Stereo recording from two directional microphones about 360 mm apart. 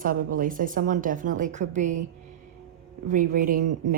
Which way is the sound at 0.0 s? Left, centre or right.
Right.